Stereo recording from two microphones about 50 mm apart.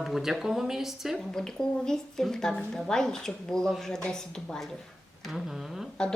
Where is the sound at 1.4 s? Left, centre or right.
Centre.